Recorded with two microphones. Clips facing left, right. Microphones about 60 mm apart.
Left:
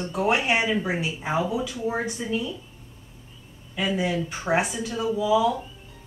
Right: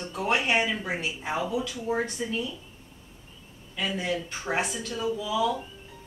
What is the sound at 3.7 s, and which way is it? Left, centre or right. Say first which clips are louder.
Speech: left 4 dB; centre.